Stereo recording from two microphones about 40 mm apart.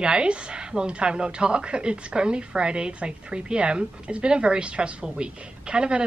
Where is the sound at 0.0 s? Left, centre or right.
Right.